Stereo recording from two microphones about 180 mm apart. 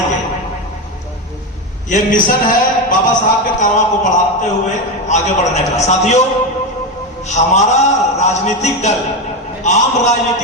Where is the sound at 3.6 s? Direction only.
40° left (ahead or behind).